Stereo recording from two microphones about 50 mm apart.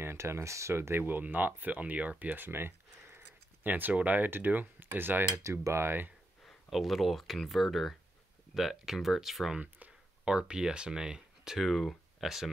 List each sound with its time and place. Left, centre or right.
0.0 s speech: right
5.2 s speech: right
6.4 s speech: centre
9.6 s a sound: right
10.2 s speech: centre